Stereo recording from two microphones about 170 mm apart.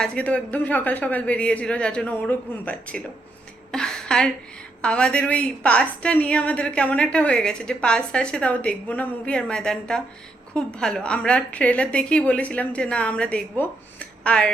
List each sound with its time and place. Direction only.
0.0 s a woman's voice: 5° left (ahead or behind)
3.7 s a sound: 5° left (ahead or behind)
4.8 s a woman's voice: 5° left (ahead or behind)